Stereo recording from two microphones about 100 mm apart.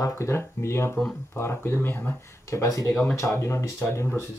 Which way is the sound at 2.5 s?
30° left (ahead or behind).